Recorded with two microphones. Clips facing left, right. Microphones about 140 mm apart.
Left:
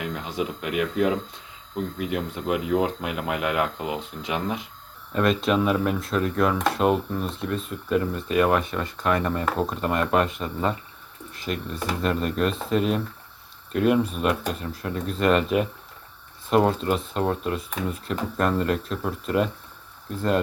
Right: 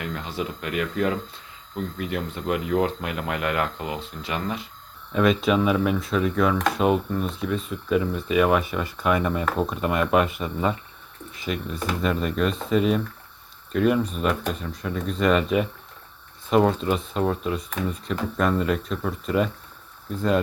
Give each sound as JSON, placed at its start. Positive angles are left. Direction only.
{"t": 0.0, "sound": "speech", "side_deg": 10}
{"t": 5.1, "sound": "speech", "side_deg": 0}